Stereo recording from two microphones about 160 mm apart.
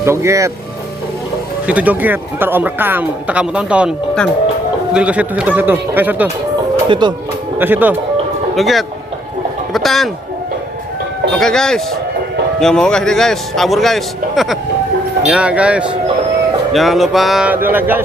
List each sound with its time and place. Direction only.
0.0 s speech: 15° right (ahead or behind)
1.6 s speech: 10° right (ahead or behind)
4.9 s speech: 10° right (ahead or behind)
6.8 s speech: 30° right (ahead or behind)
7.6 s speech: 10° right (ahead or behind)
8.5 s speech: centre (ahead or behind)
11.3 s a man's voice: 5° left (ahead or behind); by 18.0 s 10° right (ahead or behind)